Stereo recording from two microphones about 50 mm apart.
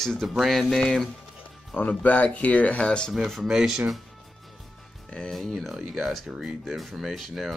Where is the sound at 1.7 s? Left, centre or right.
Left.